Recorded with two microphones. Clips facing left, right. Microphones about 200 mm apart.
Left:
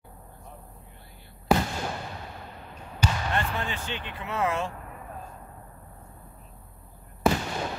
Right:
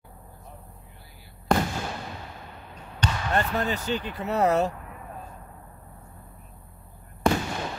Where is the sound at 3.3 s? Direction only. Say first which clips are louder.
Right 4 dB; 40° right (ahead or behind).